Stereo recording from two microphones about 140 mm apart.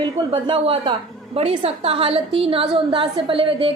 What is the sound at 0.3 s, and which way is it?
A woman's voice, 40° right (ahead or behind).